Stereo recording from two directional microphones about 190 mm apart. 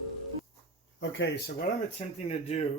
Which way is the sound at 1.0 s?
75° left (ahead or behind).